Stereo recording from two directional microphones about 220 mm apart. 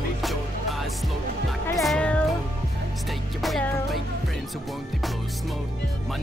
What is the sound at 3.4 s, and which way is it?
Music, centre (ahead or behind).